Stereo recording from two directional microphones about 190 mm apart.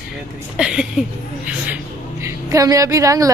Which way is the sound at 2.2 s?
15° right (ahead or behind).